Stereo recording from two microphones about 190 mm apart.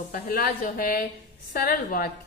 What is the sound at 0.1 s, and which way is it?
A woman's voice, 50° left (ahead or behind).